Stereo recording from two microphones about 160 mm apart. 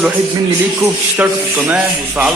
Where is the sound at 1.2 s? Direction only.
10° right (ahead or behind).